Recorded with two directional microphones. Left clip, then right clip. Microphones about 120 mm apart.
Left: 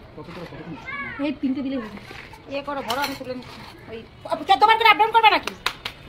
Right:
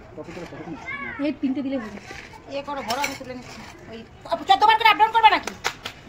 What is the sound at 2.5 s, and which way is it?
Speech, 10° left (ahead or behind).